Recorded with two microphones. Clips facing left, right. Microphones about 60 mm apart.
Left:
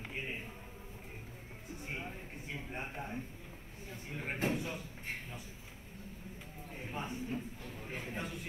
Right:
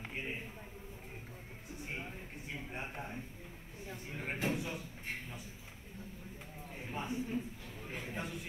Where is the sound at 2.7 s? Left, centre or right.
Centre.